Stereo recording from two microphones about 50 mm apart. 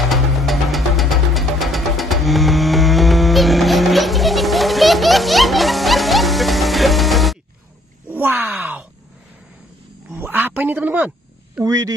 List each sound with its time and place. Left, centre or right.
0.1 s music: centre
8.1 s groan: right
8.5 s groan: right
10.1 s a sound: right
10.6 s speech: right
11.6 s speech: centre